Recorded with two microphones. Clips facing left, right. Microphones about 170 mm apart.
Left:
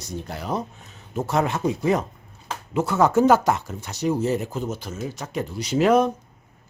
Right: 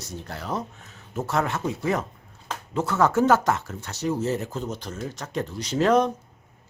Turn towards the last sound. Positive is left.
turn(degrees=10)  # may be behind; listen again after turning